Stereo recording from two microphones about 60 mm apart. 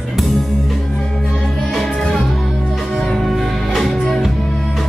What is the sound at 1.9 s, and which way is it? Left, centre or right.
Music, centre.